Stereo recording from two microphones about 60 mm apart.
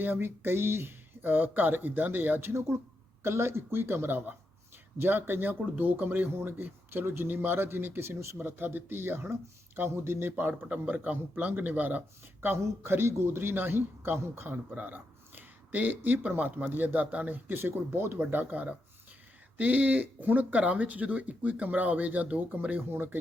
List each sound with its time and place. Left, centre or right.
0.0 s speech: right
2.5 s speech: right
10.7 s speech: right
12.6 s speech: right
18.5 s speech: right
22.9 s speech: right